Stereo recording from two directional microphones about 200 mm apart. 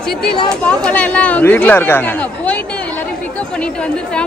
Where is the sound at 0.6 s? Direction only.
5° left (ahead or behind).